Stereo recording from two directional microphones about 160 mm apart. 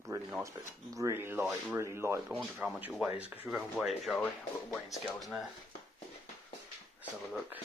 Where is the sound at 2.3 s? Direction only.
5° right (ahead or behind).